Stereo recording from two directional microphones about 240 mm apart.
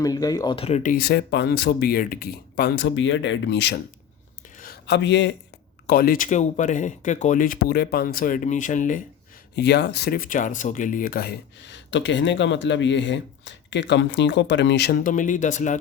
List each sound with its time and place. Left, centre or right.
0.0 s speech: centre; by 3.8 s left
4.5 s a sound: left
5.9 s speech: left
9.6 s speech: left